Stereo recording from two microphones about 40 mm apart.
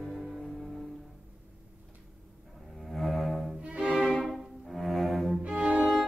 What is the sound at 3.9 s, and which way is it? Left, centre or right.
Music, left.